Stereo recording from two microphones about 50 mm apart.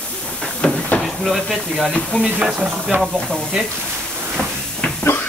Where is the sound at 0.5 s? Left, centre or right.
Centre.